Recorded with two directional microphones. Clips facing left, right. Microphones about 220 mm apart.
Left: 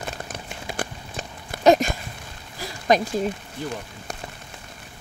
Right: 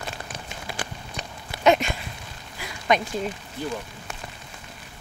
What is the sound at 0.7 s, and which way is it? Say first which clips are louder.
Walk: left 3 dB; 50° left (ahead or behind).